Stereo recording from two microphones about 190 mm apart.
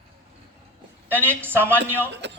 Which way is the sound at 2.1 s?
65° right (ahead or behind).